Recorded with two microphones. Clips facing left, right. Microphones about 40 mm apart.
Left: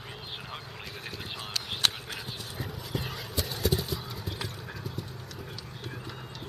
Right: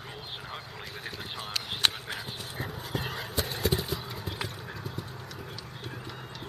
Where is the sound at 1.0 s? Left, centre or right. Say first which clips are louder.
Right 1 dB; centre.